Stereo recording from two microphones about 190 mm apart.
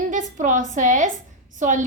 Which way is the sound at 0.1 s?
40° right (ahead or behind).